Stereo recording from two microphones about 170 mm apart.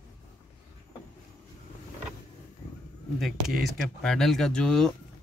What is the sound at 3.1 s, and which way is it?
Speech, centre (ahead or behind).